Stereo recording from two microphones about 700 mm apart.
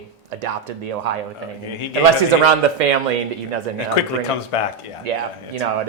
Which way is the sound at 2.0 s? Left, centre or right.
Right.